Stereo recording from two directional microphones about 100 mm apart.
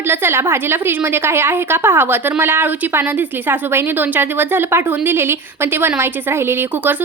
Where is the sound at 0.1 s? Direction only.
25° right (ahead or behind).